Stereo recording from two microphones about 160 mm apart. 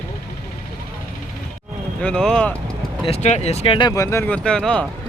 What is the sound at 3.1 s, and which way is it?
Speech, 45° left (ahead or behind).